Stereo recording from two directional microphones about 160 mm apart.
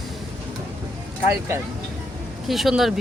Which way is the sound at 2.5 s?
Centre (ahead or behind).